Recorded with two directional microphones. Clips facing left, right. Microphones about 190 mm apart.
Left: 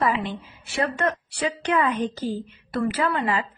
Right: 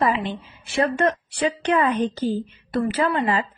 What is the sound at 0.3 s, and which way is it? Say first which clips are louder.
A woman's voice: right 2 dB; 30° right (ahead or behind).